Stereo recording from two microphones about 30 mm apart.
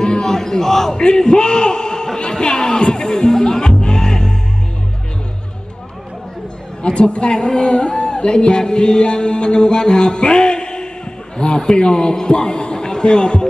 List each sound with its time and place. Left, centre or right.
0.0 s a man's voice: centre
0.9 s a man's voice: left
3.8 s music: left
6.8 s a man's voice: left